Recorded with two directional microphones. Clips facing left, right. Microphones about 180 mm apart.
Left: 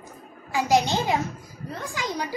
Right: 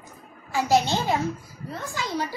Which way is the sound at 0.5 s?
15° left (ahead or behind).